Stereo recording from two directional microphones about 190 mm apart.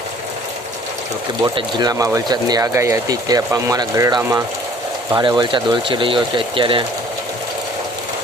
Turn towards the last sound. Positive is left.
turn(degrees=-25)  # may be behind; listen again after turning